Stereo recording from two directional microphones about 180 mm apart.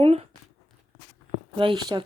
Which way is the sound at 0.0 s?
35° right (ahead or behind).